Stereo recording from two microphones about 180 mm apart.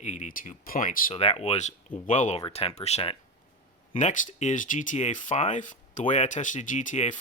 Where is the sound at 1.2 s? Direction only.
35° left (ahead or behind).